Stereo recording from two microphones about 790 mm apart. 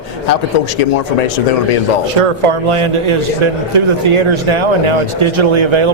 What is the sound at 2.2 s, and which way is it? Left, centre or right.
Speech, right.